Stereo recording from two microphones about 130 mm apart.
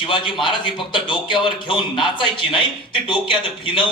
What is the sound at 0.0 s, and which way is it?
A man's voice, 40° left (ahead or behind).